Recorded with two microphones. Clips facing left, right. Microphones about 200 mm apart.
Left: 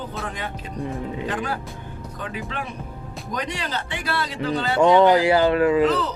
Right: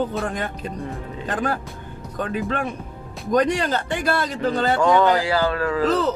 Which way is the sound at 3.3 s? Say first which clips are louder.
Right 10 dB; 50° right (ahead or behind).